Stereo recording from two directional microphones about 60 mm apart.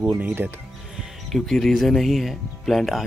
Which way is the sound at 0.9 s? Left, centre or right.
Centre.